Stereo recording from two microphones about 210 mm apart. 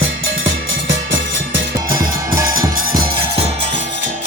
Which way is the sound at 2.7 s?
40° right (ahead or behind).